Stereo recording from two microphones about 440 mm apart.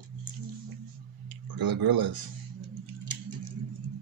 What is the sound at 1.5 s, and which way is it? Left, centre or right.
Speech, right.